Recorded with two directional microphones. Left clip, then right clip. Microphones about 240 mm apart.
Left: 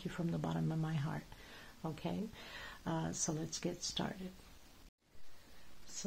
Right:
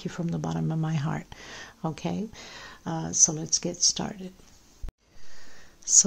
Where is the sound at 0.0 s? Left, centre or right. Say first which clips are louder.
Right 8 dB; centre.